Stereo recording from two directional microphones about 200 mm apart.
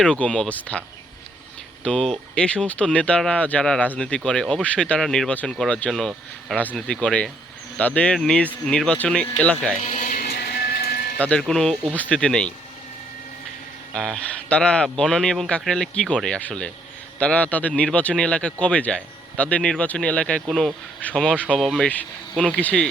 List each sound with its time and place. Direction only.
0.0 s speech: 5° left (ahead or behind)
9.8 s a sound: 40° left (ahead or behind)
11.2 s speech: 5° left (ahead or behind)
13.9 s a man's voice: 5° left (ahead or behind)